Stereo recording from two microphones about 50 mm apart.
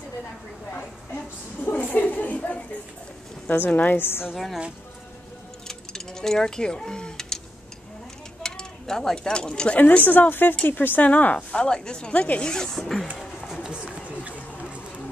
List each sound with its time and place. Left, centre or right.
0.7 s a sound: left
3.4 s speech: left
4.0 s a woman's voice: left
5.7 s a sound: centre
8.4 s speech: centre
9.8 s speech: left
11.1 s speech: left
11.5 s speech: centre
13.5 s run: centre